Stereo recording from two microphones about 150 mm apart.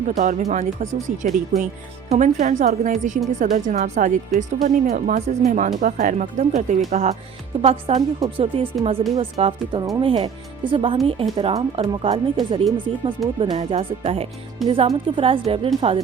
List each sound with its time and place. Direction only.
0.2 s speech: 55° right (ahead or behind)
2.0 s speech: 50° right (ahead or behind)
7.6 s speech: 40° right (ahead or behind)